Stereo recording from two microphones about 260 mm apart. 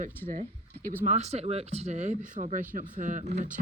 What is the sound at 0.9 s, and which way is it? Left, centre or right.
Speech, right.